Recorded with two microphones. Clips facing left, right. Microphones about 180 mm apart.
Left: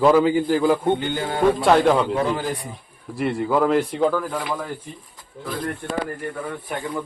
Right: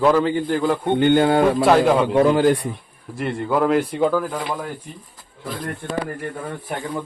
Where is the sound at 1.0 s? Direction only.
65° right (ahead or behind).